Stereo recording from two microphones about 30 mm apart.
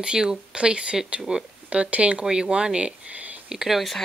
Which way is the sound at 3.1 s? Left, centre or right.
Right.